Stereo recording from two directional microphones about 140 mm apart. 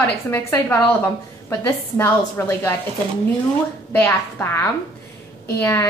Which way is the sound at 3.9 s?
15° left (ahead or behind).